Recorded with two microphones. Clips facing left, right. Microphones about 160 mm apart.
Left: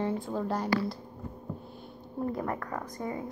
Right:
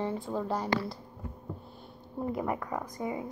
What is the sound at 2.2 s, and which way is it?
A woman's voice, 10° right (ahead or behind).